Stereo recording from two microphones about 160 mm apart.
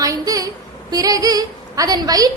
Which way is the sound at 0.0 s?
20° right (ahead or behind).